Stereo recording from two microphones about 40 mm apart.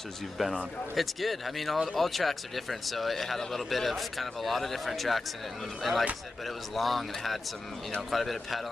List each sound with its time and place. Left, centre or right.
0.4 s speech: centre